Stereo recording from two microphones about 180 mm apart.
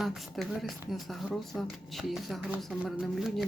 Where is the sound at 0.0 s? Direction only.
Centre (ahead or behind).